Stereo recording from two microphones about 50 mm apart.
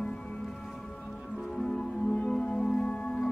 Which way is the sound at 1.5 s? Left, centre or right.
Centre.